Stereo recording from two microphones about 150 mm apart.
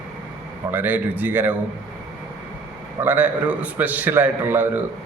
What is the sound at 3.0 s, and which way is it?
A man's voice, 10° right (ahead or behind).